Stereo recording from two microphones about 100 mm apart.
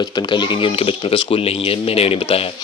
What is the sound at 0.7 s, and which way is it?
Speech, 75° left (ahead or behind).